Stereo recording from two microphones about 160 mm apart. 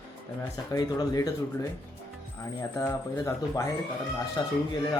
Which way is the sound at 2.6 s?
20° left (ahead or behind).